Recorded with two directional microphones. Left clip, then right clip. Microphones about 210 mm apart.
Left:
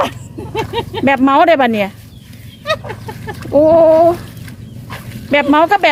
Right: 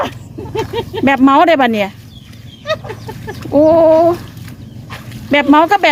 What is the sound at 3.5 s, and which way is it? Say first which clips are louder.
Speech: even; 10° right (ahead or behind).